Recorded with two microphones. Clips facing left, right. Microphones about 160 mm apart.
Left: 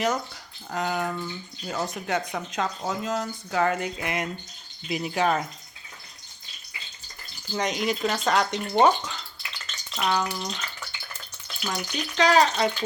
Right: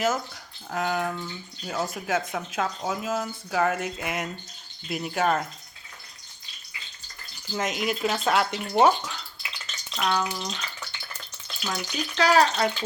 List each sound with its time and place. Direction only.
0.7 s speech: centre (ahead or behind)
7.5 s speech: centre (ahead or behind)